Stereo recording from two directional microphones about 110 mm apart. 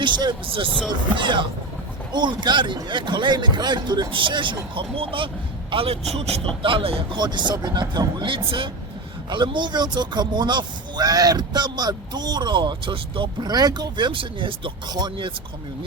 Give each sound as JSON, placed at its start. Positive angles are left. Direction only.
{"t": 0.0, "sound": "speech", "side_deg": -45}
{"t": 6.1, "sound": "speech", "side_deg": -70}
{"t": 6.6, "sound": "speech", "side_deg": -55}
{"t": 7.2, "sound": "speech", "side_deg": -40}